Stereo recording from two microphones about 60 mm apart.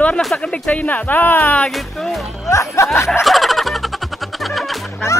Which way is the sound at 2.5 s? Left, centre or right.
Left.